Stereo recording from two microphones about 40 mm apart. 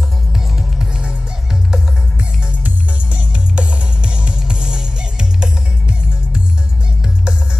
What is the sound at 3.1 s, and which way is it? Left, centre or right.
Music, right.